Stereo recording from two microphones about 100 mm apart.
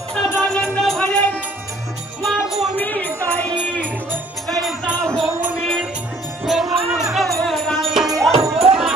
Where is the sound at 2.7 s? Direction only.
20° left (ahead or behind).